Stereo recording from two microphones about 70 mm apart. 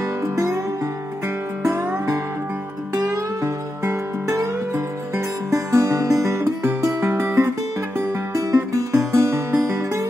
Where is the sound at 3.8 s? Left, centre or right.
Right.